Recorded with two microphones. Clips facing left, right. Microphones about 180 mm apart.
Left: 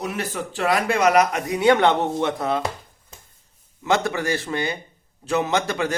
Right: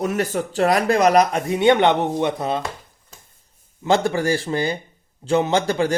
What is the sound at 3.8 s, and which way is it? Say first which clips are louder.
Speech: right 3 dB; 30° right (ahead or behind).